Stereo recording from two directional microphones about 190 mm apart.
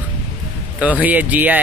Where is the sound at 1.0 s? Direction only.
10° right (ahead or behind).